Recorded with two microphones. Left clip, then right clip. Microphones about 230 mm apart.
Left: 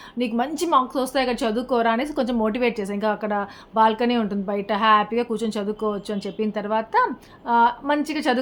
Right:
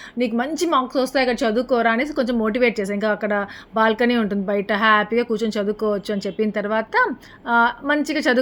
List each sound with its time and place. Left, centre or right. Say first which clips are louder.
0.2 s a woman's voice: right 2 dB; centre